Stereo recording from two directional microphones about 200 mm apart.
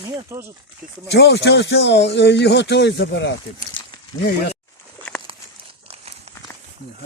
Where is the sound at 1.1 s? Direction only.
60° left (ahead or behind).